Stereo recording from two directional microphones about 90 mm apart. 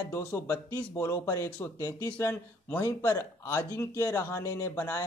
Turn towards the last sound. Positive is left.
turn(degrees=35)  # may be behind; listen again after turning